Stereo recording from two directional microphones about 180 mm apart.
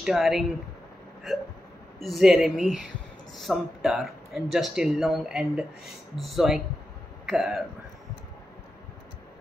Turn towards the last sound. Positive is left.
turn(degrees=0)  # may be behind; listen again after turning